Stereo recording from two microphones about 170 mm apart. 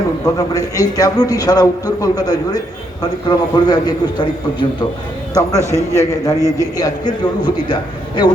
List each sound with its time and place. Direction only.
0.3 s a man's voice: 20° left (ahead or behind)
5.3 s a man's voice: 20° left (ahead or behind)